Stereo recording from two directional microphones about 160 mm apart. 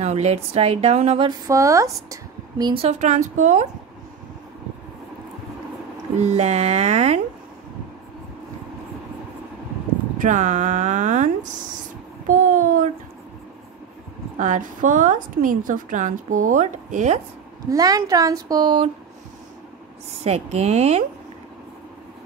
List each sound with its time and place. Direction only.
0.0 s a woman's voice: 45° right (ahead or behind)
1.5 s a woman's voice: 20° right (ahead or behind)
2.6 s a woman's voice: 35° right (ahead or behind)
6.2 s a woman's voice: 45° right (ahead or behind)
10.1 s a woman's voice: 50° right (ahead or behind)
12.3 s a sound: 55° right (ahead or behind)
14.4 s a woman's voice: 55° right (ahead or behind)
17.6 s a woman's voice: 25° right (ahead or behind)
20.2 s a woman's voice: 40° right (ahead or behind)